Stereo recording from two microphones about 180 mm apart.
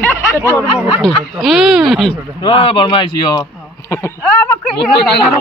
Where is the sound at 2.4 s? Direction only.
30° left (ahead or behind).